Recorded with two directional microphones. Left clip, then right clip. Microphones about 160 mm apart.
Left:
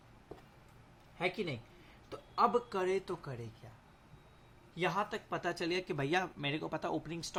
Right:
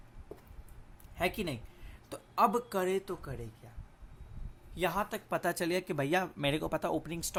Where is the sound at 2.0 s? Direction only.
45° right (ahead or behind).